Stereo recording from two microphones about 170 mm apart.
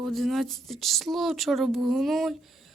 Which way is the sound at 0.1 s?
Centre (ahead or behind).